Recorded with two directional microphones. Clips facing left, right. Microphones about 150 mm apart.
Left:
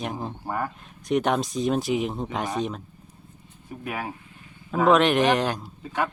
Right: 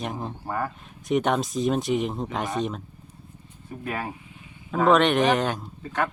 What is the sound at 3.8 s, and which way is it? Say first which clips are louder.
Speech: right 1 dB; 5° left (ahead or behind).